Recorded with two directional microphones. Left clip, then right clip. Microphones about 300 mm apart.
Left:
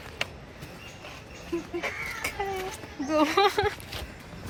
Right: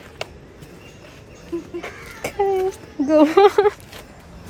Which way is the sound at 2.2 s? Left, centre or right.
Right.